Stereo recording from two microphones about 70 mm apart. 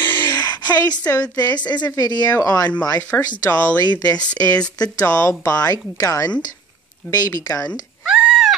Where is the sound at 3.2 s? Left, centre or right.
Left.